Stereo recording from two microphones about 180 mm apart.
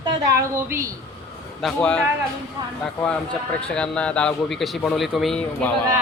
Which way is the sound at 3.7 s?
5° left (ahead or behind).